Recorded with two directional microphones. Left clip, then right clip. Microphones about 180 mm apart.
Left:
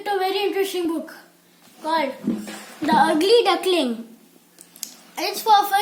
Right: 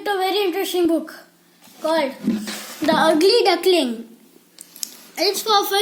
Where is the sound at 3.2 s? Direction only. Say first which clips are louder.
Right 1 dB; 35° left (ahead or behind).